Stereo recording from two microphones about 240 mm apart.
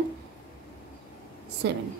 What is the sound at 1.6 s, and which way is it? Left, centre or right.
Speech, right.